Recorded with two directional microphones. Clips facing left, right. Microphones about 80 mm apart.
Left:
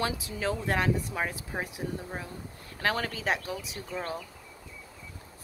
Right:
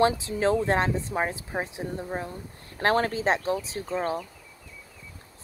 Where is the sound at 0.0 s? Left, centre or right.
Right.